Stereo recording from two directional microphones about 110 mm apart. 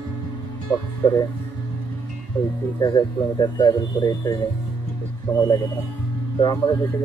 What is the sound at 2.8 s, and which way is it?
Speech, 40° left (ahead or behind).